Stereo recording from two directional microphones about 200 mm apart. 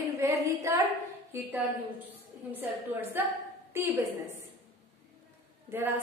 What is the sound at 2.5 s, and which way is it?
A woman's voice, 10° right (ahead or behind).